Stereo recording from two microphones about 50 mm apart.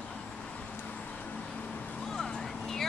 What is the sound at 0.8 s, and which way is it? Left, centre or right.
Vehicle, left.